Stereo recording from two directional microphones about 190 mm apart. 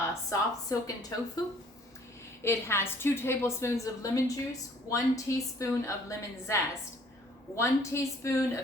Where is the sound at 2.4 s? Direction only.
15° left (ahead or behind).